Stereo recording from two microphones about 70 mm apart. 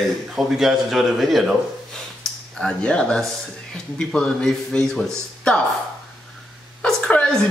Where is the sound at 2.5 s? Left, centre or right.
Centre.